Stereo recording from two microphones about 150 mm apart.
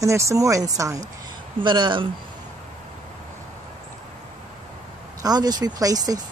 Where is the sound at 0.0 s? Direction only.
20° right (ahead or behind).